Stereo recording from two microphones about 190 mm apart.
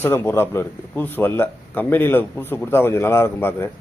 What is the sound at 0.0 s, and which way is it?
Speech, 10° left (ahead or behind).